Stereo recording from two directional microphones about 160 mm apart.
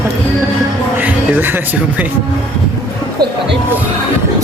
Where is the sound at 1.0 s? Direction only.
10° right (ahead or behind).